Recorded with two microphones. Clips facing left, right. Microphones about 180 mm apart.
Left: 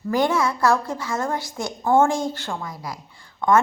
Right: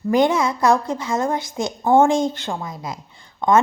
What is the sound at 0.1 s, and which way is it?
A woman's voice, 20° right (ahead or behind).